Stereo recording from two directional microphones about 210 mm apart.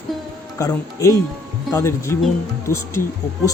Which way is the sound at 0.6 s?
15° left (ahead or behind).